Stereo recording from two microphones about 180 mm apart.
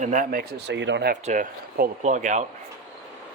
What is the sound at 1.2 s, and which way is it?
Speech, 45° right (ahead or behind).